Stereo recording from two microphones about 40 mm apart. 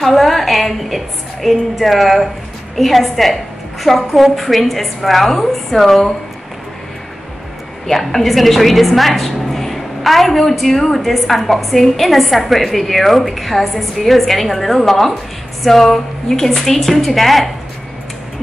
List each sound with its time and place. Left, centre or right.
0.0 s a woman's voice: centre
7.8 s a woman's voice: centre